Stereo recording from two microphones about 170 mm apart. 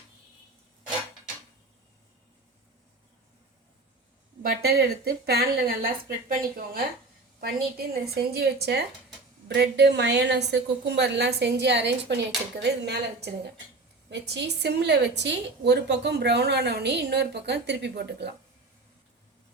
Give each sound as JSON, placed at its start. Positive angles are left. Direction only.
{"t": 4.6, "sound": "speech", "side_deg": -70}
{"t": 7.4, "sound": "a woman's voice", "side_deg": -65}